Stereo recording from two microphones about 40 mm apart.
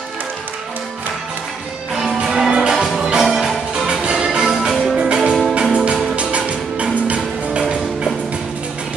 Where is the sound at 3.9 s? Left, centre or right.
Right.